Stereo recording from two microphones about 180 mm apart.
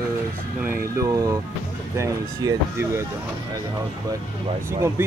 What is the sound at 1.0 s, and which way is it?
Speech, 20° right (ahead or behind).